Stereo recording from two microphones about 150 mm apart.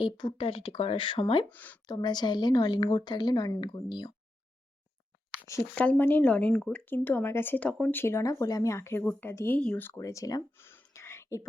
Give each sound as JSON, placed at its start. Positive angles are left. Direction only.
{"t": 0.0, "sound": "speech", "side_deg": 30}
{"t": 1.5, "sound": "speech", "side_deg": 10}
{"t": 1.9, "sound": "speech", "side_deg": 30}
{"t": 5.7, "sound": "speech", "side_deg": 10}